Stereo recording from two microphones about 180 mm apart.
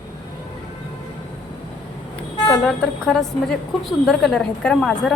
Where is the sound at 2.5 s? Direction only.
5° left (ahead or behind).